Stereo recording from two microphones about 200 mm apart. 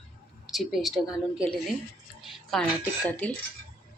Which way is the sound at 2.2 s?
5° left (ahead or behind).